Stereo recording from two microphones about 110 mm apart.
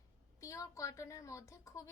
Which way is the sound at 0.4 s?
30° left (ahead or behind).